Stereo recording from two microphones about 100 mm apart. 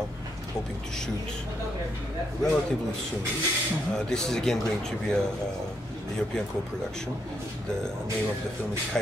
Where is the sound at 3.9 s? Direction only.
5° left (ahead or behind).